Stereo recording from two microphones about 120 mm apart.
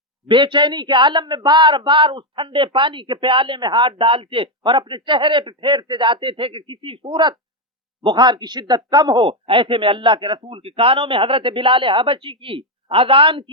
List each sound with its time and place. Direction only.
0.3 s a man's voice: 40° right (ahead or behind)